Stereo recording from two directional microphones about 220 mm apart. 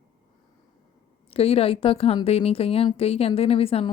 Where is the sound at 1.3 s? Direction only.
25° left (ahead or behind).